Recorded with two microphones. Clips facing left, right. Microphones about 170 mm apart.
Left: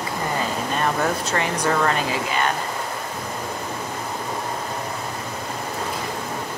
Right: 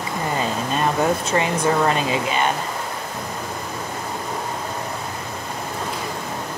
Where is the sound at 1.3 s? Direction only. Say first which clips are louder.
Right 3 dB; 20° right (ahead or behind).